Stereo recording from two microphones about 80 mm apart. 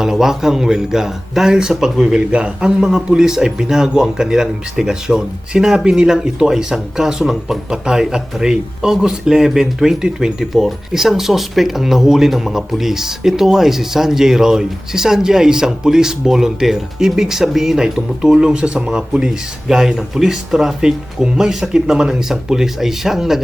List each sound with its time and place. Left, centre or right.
0.0 s speech: centre